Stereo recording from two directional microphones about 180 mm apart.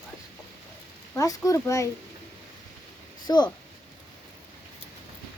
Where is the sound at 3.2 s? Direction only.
25° left (ahead or behind).